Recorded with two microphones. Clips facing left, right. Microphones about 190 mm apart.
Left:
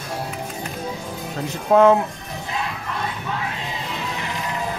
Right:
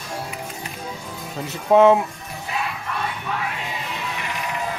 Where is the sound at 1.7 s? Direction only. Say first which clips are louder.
Even; centre (ahead or behind).